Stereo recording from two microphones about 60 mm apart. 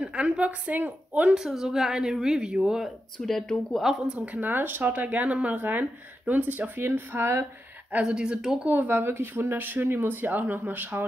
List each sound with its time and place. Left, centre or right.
0.0 s a woman's voice: right
1.3 s speech: centre
3.2 s speech: centre
4.3 s speech: right
8.0 s speech: centre
8.6 s speech: right